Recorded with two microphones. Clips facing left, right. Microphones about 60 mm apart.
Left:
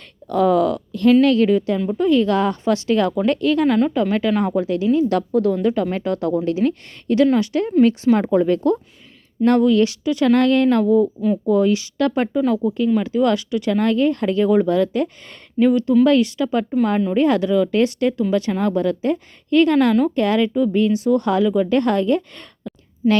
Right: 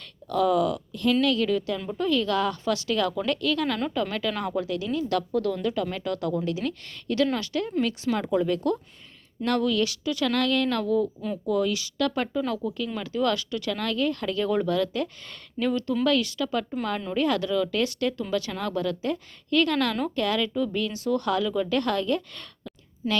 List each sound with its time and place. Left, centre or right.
0.3 s speech: left
1.2 s a woman's voice: left
12.3 s speech: centre
12.6 s speech: left